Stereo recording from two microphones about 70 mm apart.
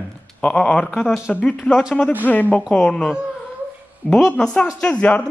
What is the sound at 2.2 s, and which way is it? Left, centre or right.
Speech, left.